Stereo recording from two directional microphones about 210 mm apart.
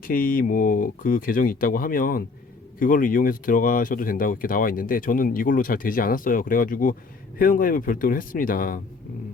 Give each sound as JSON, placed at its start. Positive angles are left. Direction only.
{"t": 0.0, "sound": "speech", "side_deg": 45}